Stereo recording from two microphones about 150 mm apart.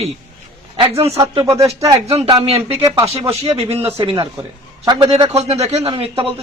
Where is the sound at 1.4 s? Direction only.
20° right (ahead or behind).